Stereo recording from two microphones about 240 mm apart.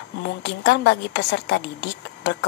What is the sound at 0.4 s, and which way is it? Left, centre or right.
A woman's voice, left.